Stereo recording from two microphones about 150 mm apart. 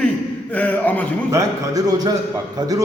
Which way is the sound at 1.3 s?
20° right (ahead or behind).